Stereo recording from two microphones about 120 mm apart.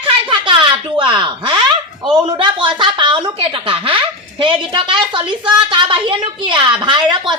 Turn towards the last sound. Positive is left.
turn(degrees=-40)  # may be behind; listen again after turning